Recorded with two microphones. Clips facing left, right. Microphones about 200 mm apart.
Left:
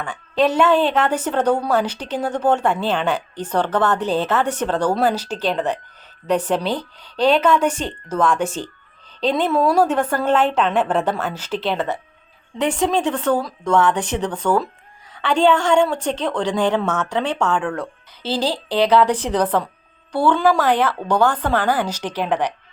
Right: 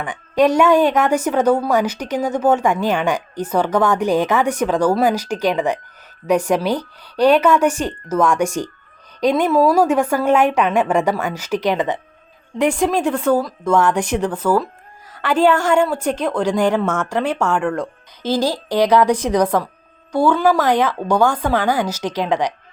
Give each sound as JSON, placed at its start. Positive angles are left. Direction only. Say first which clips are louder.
{"t": 0.0, "sound": "a woman's voice", "louder": "right 3 dB", "side_deg": -15}